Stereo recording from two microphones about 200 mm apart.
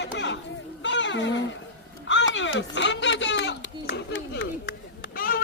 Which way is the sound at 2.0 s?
65° left (ahead or behind).